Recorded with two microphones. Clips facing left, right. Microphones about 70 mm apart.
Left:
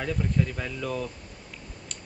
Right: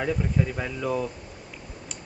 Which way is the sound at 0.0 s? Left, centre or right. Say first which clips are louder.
Right 2 dB; centre.